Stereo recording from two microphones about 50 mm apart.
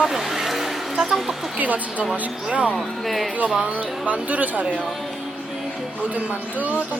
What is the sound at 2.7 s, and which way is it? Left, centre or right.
Speech, centre.